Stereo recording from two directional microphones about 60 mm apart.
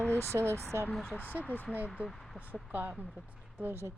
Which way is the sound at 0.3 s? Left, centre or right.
Right.